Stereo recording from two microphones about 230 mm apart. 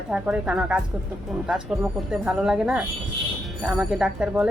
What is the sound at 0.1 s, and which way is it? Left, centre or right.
Speech, centre.